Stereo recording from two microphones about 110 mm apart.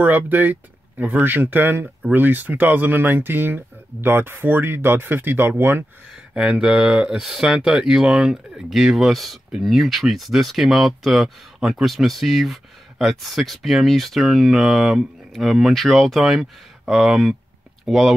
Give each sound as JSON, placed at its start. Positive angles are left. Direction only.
{"t": 0.0, "sound": "speech", "side_deg": -15}
{"t": 6.3, "sound": "speech", "side_deg": -10}